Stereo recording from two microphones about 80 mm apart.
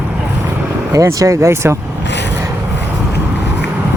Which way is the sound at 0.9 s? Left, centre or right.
Right.